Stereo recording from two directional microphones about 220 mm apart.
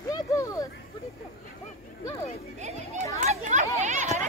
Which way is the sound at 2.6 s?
30° right (ahead or behind).